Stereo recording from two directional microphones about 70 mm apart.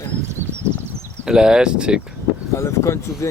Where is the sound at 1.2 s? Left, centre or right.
Centre.